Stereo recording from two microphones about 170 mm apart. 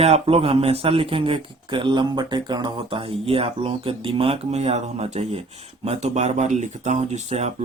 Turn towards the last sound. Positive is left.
turn(degrees=-40)  # may be behind; listen again after turning